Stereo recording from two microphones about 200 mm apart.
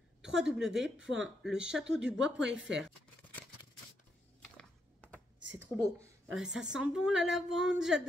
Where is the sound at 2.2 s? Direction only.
65° right (ahead or behind).